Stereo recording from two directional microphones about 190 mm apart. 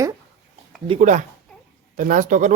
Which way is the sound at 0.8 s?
35° right (ahead or behind).